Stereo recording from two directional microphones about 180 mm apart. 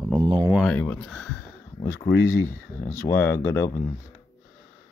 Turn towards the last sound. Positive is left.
turn(degrees=15)  # may be behind; listen again after turning